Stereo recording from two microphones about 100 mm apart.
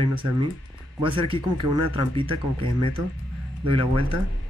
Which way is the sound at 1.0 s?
60° right (ahead or behind).